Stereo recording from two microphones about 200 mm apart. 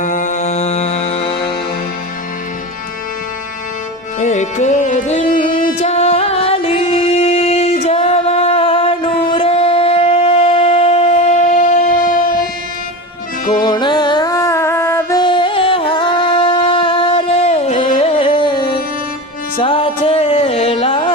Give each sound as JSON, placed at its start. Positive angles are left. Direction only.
{"t": 0.0, "sound": "music", "side_deg": 40}
{"t": 4.2, "sound": "music", "side_deg": 35}
{"t": 13.5, "sound": "music", "side_deg": 20}
{"t": 15.2, "sound": "music", "side_deg": 25}